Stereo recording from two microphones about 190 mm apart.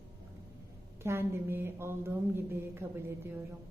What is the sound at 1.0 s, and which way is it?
Speech, 15° right (ahead or behind).